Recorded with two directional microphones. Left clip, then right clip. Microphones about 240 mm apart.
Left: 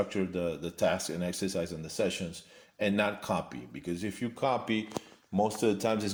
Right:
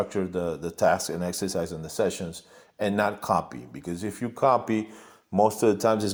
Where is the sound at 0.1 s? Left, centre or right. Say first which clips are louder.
Right 4 dB; right.